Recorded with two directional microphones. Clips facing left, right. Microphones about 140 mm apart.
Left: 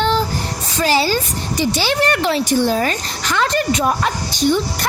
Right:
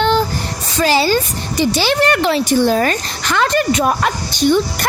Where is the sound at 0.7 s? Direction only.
90° right.